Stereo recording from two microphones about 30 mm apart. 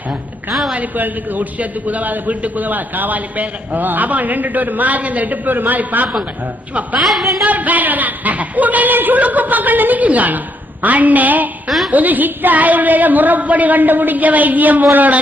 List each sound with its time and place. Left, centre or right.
0.8 s a man's voice: right
2.6 s a man's voice: right
7.0 s a woman's voice: centre
7.4 s a man's voice: right
9.2 s a man's voice: right